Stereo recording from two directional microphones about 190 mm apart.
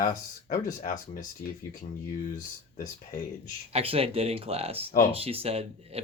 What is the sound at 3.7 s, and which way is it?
Speech, 30° right (ahead or behind).